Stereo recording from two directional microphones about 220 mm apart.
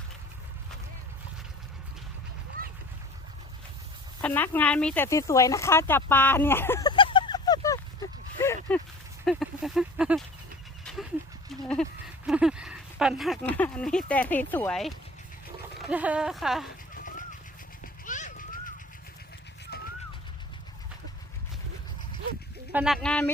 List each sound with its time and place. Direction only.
2.6 s a sound: 40° right (ahead or behind)
4.2 s speech: 10° left (ahead or behind)
8.4 s a sound: 10° left (ahead or behind)
9.2 s speech: centre (ahead or behind)
10.9 s goat: 5° left (ahead or behind)
11.6 s speech: 5° left (ahead or behind)
16.9 s a sound: 40° left (ahead or behind)
19.7 s pigeon: 45° left (ahead or behind)
22.7 s speech: 5° right (ahead or behind)